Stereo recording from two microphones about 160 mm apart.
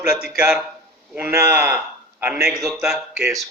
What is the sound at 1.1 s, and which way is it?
A man's voice, 15° right (ahead or behind).